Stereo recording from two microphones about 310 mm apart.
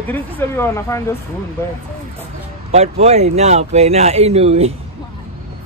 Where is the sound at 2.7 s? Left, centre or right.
Centre.